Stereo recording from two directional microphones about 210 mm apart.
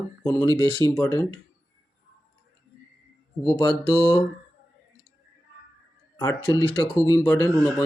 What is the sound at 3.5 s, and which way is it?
Speech, 20° left (ahead or behind).